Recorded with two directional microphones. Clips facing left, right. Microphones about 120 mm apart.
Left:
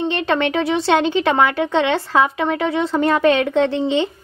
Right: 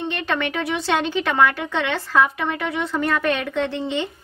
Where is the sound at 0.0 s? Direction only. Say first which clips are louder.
Left 6 dB; 25° left (ahead or behind).